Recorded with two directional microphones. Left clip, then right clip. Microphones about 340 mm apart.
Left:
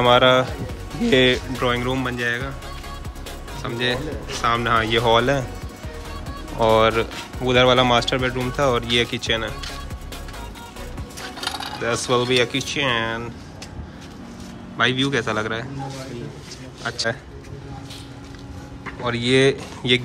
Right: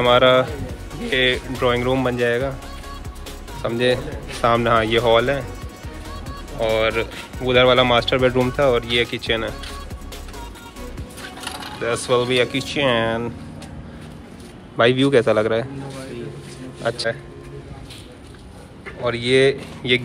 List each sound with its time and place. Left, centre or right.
0.0 s speech: centre
3.6 s speech: centre
6.6 s speech: centre
11.8 s speech: centre
14.8 s speech: centre
16.8 s speech: centre
19.0 s speech: centre